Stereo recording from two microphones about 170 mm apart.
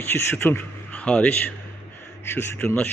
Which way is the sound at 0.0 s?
10° left (ahead or behind).